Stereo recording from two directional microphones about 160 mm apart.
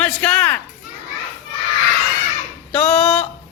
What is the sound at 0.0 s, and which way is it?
Music, 10° left (ahead or behind).